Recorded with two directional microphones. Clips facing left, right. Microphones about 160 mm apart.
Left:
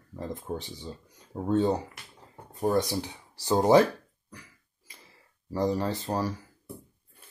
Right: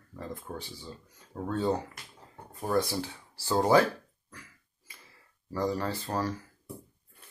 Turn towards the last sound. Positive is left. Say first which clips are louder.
# left 1 dB
turn(degrees=15)  # may be behind; listen again after turning